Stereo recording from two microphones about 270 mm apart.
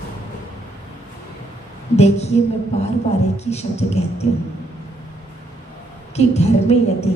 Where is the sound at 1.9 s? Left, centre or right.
Left.